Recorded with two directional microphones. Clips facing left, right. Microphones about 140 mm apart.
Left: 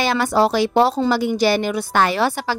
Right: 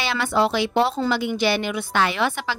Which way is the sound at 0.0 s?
40° left (ahead or behind).